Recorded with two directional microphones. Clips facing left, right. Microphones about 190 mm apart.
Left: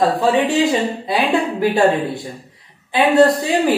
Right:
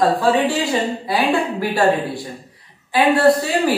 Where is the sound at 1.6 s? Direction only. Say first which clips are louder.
Left 3 dB; 20° left (ahead or behind).